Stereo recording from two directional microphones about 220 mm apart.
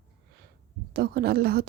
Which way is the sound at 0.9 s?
45° right (ahead or behind).